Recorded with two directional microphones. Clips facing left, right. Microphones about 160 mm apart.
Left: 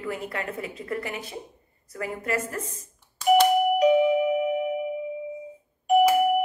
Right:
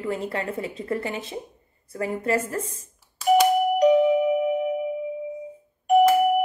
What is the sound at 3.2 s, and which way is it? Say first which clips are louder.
Doorbell: even; 5° right (ahead or behind).